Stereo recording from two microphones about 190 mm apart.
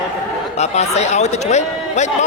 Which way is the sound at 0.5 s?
35° left (ahead or behind).